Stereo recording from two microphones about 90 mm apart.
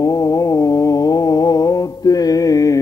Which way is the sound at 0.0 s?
40° left (ahead or behind).